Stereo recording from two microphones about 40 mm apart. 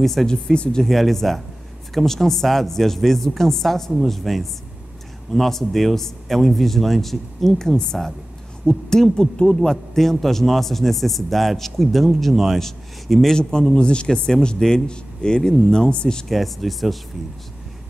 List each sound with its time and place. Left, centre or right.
0.0 s speech: centre
0.3 s a woman's voice: centre
0.8 s a woman's voice: centre
13.4 s speech: centre
16.3 s speech: centre